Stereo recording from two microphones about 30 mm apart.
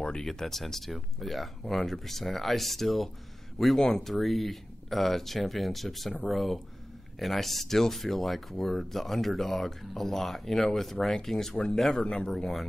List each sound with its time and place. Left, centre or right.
0.2 s speech: centre
12.0 s speech: left